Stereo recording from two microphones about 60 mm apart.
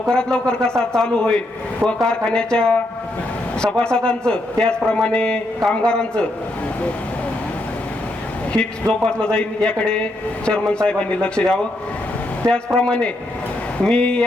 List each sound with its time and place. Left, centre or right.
0.1 s a man's voice: centre
8.5 s a man's voice: centre